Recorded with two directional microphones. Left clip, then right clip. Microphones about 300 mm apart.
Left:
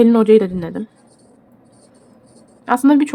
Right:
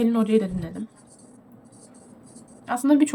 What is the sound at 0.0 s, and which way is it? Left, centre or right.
Speech, centre.